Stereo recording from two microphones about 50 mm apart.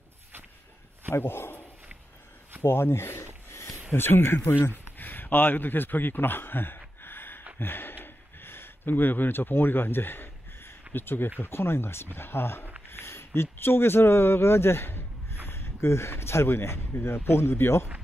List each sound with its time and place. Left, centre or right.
1.1 s speech: left
2.6 s speech: left
3.4 s a sound: left
3.9 s speech: left
4.9 s a sound: left
7.5 s speech: left